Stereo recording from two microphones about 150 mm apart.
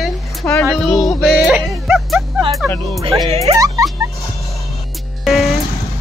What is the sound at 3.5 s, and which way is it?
Music, 25° right (ahead or behind).